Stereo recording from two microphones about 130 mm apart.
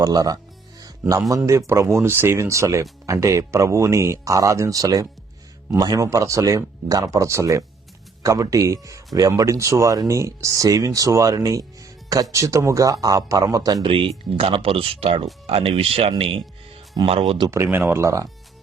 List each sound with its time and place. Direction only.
0.0 s speech: 30° right (ahead or behind)
0.8 s music: 25° right (ahead or behind)
1.5 s speech: 25° right (ahead or behind)
13.8 s speech: 45° right (ahead or behind)
17.5 s speech: 15° right (ahead or behind)